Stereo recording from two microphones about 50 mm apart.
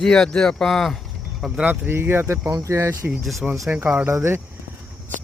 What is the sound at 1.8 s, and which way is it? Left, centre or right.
Speech, right.